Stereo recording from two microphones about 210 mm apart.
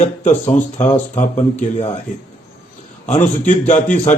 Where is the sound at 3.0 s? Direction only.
35° left (ahead or behind).